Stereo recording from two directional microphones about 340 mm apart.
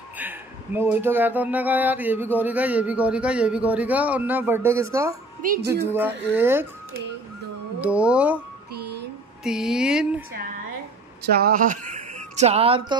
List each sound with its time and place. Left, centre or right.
0.2 s speech: centre
5.4 s speech: right
5.9 s speech: centre
7.8 s speech: centre
9.4 s speech: centre
11.2 s speech: right